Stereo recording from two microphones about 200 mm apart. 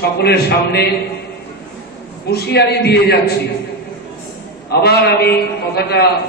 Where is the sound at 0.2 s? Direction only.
55° left (ahead or behind).